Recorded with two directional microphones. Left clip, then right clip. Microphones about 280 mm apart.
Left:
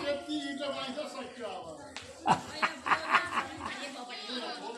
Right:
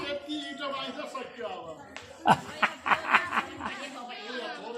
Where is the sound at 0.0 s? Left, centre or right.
Left.